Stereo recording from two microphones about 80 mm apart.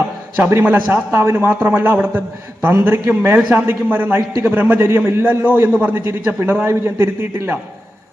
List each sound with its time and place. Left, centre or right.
0.3 s a man's voice: right